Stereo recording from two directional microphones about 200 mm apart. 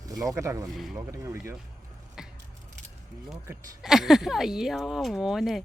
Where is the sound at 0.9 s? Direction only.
15° right (ahead or behind).